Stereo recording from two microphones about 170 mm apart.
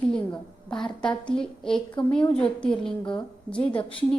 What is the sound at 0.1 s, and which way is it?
A woman's voice, 5° left (ahead or behind).